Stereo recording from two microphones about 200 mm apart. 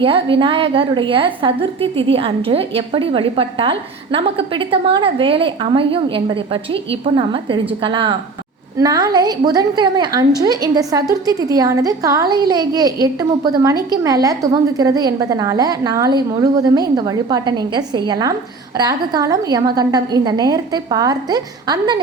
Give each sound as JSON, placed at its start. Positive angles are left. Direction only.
{"t": 0.0, "sound": "a woman's voice", "side_deg": -25}